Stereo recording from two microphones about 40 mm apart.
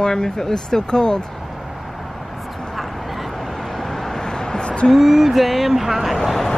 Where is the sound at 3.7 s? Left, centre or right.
Centre; by 4.9 s left.